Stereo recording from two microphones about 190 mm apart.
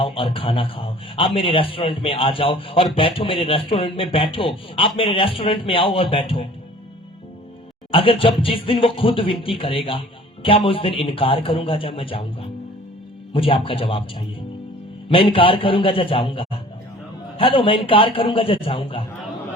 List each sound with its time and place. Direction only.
0.0 s a man's voice: 25° left (ahead or behind)
7.9 s a man's voice: 30° left (ahead or behind)
15.1 s a man's voice: 30° left (ahead or behind)